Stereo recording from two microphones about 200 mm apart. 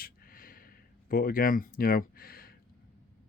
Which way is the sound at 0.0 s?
45° left (ahead or behind).